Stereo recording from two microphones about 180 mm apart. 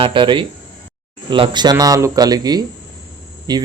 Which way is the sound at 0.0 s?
25° right (ahead or behind).